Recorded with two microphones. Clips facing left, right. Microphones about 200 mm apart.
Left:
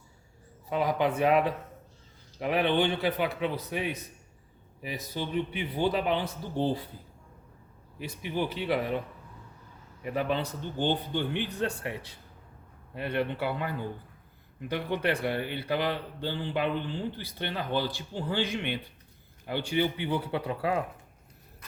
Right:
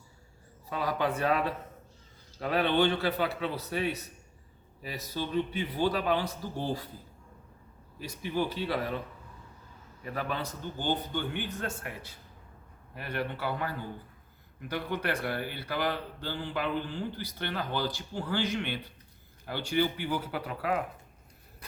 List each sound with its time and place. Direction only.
0.7 s a man's voice: 20° left (ahead or behind)
7.9 s a man's voice: 15° left (ahead or behind)
10.0 s speech: 15° left (ahead or behind)
13.0 s speech: 25° left (ahead or behind)